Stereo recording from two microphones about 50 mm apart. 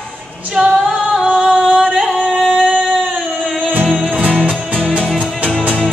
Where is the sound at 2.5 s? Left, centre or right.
Centre.